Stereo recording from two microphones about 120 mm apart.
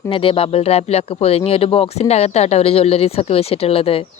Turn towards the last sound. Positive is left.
turn(degrees=50)  # may be behind; listen again after turning